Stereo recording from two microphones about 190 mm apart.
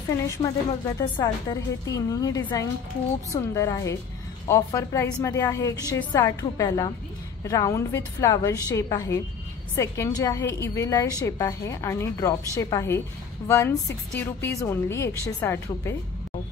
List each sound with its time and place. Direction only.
0.4 s a woman's voice: 25° left (ahead or behind)